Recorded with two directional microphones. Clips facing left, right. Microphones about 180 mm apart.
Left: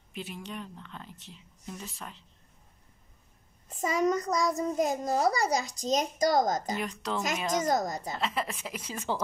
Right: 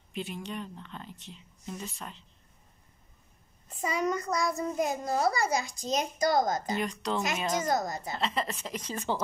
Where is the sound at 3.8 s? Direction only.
40° left (ahead or behind).